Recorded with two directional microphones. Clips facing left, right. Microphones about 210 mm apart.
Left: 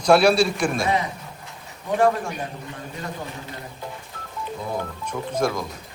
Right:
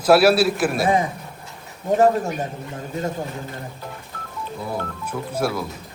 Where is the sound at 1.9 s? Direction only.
40° right (ahead or behind).